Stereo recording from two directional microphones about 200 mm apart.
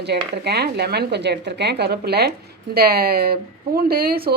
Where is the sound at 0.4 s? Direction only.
55° right (ahead or behind).